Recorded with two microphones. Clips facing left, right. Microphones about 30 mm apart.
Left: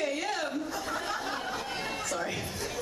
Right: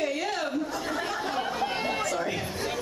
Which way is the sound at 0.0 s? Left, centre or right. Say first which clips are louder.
Right 2 dB; centre.